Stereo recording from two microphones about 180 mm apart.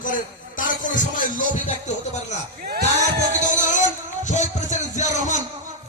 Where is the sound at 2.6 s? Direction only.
55° right (ahead or behind).